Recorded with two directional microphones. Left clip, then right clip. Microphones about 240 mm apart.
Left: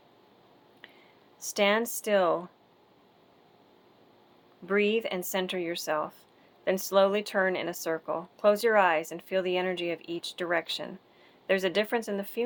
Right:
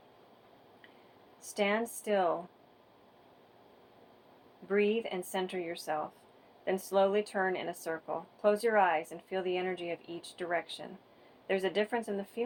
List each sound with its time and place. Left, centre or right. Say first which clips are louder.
1.4 s speech: left 6 dB; left
4.7 s speech: left 4 dB; left